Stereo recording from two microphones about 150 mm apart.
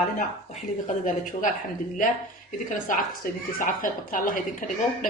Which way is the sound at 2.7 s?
65° left (ahead or behind).